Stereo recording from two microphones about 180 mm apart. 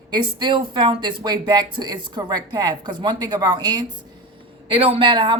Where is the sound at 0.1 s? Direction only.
25° right (ahead or behind).